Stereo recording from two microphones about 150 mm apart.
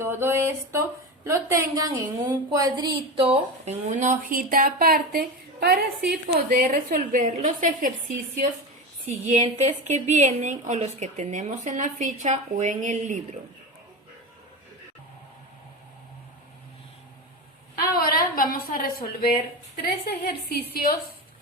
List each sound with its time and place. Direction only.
0.0 s speech: 15° right (ahead or behind); by 5.8 s 90° right
6.1 s speech: 70° right (ahead or behind)
9.0 s a woman's voice: 50° right (ahead or behind)
17.9 s a woman's voice: 80° left
20.1 s a woman's voice: 90° left